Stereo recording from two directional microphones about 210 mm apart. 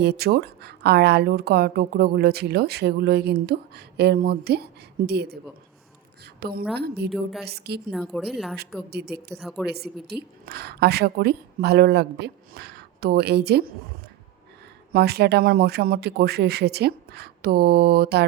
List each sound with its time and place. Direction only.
0.0 s a woman's voice: 50° right (ahead or behind)
7.1 s speech: centre (ahead or behind)
7.4 s a woman's voice: 50° right (ahead or behind)
7.9 s speech: centre (ahead or behind)
8.9 s a woman's voice: 50° right (ahead or behind)
9.4 s speech: centre (ahead or behind)
9.6 s a woman's voice: 50° right (ahead or behind)
14.9 s a woman's voice: 50° right (ahead or behind)